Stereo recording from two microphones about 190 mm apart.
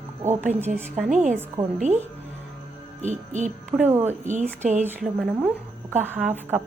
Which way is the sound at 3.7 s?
10° right (ahead or behind).